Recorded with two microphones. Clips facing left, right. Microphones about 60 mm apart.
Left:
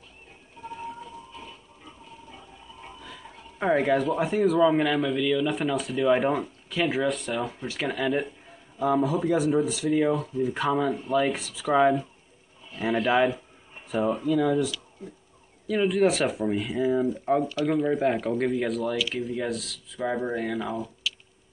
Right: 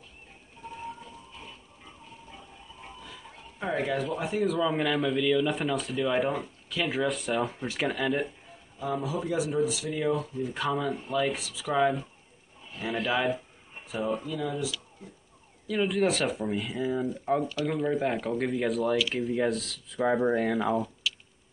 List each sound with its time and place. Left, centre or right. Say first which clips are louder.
3.5 s speech: left 7 dB; left
4.0 s speech: left 5 dB; centre
6.9 s speech: left 2 dB; centre
10.9 s speech: left 4 dB; centre
11.6 s speech: left 5 dB; centre
14.2 s speech: left 9 dB; left
14.5 s speech: left 7 dB; centre
21.0 s music: even; centre